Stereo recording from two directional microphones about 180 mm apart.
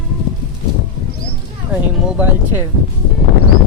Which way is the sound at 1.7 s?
5° right (ahead or behind).